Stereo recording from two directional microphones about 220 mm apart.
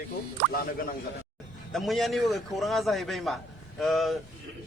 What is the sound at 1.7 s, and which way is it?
A man's voice, centre (ahead or behind).